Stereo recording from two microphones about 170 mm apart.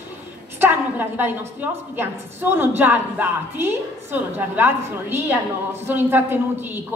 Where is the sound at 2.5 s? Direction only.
10° right (ahead or behind).